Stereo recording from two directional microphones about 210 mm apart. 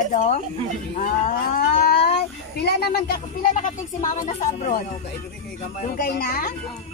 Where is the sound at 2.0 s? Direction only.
55° left (ahead or behind); by 4.8 s 35° left (ahead or behind).